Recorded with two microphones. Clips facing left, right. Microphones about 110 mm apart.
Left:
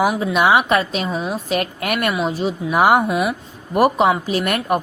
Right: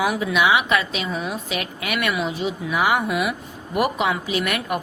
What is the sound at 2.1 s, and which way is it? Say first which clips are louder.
Speech: left 4 dB; 35° left (ahead or behind).